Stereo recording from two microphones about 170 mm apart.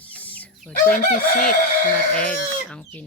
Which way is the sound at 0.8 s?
55° left (ahead or behind).